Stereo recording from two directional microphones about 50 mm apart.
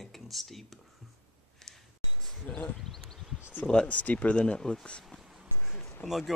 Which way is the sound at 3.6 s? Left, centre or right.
Left.